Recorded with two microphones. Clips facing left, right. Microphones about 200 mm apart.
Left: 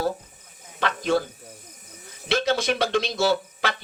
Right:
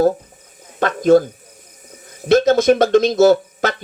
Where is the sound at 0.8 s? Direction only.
45° right (ahead or behind).